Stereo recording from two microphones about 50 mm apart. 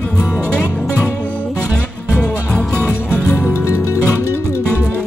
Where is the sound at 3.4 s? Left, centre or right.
Left.